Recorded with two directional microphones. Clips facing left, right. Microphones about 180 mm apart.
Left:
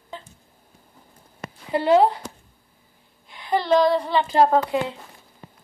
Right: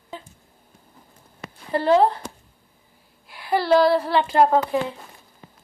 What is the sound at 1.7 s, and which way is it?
Speech, 20° left (ahead or behind).